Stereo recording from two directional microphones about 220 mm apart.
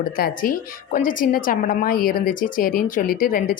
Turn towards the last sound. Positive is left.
turn(degrees=40)  # may be behind; listen again after turning